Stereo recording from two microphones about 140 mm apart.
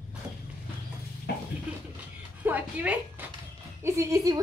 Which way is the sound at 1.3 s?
90° left.